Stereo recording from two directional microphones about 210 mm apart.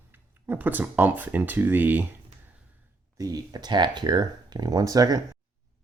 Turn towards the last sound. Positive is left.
turn(degrees=-15)  # may be behind; listen again after turning